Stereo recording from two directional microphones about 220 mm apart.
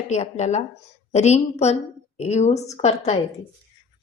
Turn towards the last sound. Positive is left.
turn(degrees=30)  # may be behind; listen again after turning